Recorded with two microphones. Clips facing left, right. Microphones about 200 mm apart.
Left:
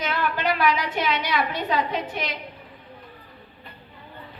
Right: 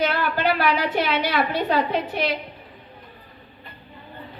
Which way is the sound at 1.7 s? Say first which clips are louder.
Right 1 dB; 35° right (ahead or behind).